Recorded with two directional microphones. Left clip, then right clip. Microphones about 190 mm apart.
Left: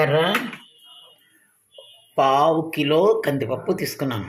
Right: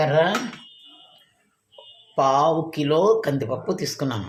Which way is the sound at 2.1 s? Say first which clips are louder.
Left 1 dB; 5° left (ahead or behind).